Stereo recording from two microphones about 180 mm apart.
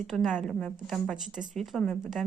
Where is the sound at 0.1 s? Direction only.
Centre (ahead or behind).